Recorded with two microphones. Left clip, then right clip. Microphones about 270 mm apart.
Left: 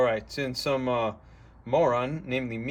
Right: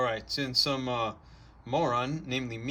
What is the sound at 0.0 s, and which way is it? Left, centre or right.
A man's voice, centre.